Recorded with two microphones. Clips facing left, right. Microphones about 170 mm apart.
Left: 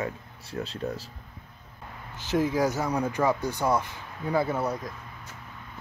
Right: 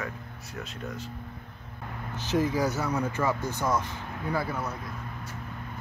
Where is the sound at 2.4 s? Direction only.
10° left (ahead or behind).